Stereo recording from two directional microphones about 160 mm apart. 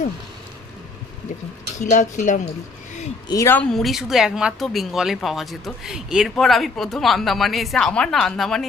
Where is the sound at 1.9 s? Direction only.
50° left (ahead or behind).